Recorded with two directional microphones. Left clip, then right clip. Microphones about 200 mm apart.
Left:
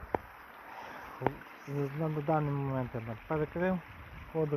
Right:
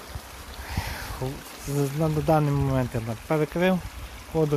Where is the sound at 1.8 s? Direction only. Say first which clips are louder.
Right 9 dB; 15° right (ahead or behind).